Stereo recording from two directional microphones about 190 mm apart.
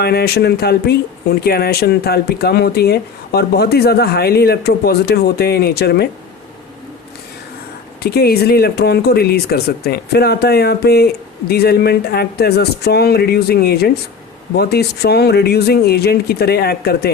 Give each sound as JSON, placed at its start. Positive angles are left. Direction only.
{"t": 0.0, "sound": "speech", "side_deg": 55}
{"t": 8.0, "sound": "speech", "side_deg": 55}